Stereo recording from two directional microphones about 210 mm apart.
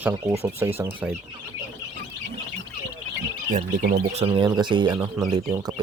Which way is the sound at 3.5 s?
40° right (ahead or behind).